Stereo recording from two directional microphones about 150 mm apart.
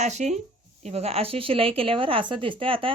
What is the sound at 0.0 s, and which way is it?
A woman's voice, 50° right (ahead or behind).